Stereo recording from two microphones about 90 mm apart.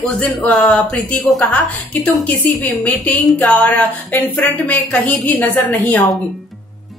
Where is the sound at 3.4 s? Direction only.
15° left (ahead or behind).